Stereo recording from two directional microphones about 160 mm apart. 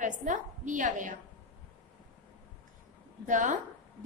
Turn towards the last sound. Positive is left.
turn(degrees=-50)  # may be behind; listen again after turning